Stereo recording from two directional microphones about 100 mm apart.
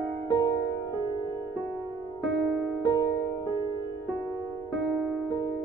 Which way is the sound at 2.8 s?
40° left (ahead or behind).